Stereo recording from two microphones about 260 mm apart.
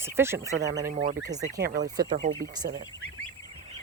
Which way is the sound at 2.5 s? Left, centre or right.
Centre.